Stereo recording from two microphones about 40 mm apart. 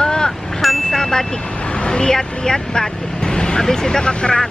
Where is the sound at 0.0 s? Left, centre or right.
Centre.